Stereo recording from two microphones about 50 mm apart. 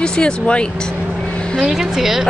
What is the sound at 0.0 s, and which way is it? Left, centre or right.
Speech, centre.